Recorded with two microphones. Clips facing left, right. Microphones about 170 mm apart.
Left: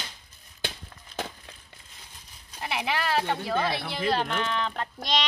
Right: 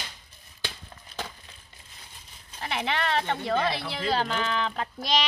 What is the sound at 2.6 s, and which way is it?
Speech, 5° left (ahead or behind).